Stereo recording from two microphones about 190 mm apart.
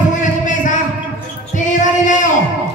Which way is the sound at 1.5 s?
40° left (ahead or behind).